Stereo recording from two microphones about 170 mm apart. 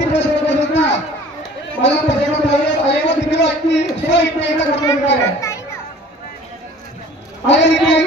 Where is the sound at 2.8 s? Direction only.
90° left.